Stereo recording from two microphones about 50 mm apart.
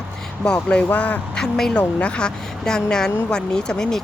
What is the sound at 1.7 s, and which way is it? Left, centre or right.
A woman's voice, left.